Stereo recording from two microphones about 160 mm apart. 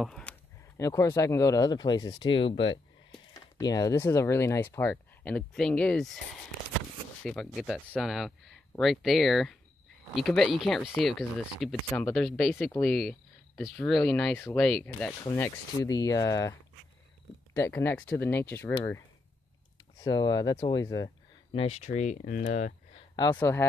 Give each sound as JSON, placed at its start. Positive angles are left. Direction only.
{"t": 0.0, "sound": "a sound", "side_deg": 5}
{"t": 0.7, "sound": "speech", "side_deg": 20}
{"t": 7.2, "sound": "speech", "side_deg": 0}
{"t": 15.2, "sound": "speech", "side_deg": 15}
{"t": 17.6, "sound": "speech", "side_deg": 15}
{"t": 20.0, "sound": "speech", "side_deg": 25}
{"t": 21.5, "sound": "speech", "side_deg": 40}
{"t": 23.3, "sound": "speech", "side_deg": 15}